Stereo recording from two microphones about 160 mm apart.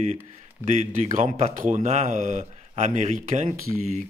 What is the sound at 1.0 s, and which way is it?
Speech, 50° right (ahead or behind).